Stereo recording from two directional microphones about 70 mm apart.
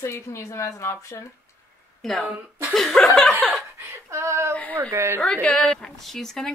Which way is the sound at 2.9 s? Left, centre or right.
Centre.